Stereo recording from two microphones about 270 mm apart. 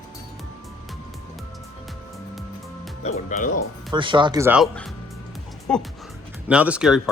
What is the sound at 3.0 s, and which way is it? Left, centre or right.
Speech, left.